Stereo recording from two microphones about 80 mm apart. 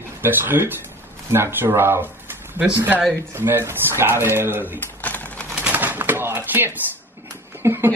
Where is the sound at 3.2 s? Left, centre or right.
Right.